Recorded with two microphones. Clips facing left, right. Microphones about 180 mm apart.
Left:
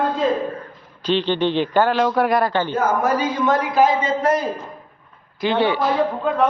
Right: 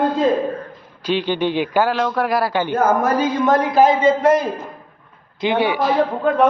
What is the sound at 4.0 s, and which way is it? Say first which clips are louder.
Speech: right 5 dB; 20° right (ahead or behind).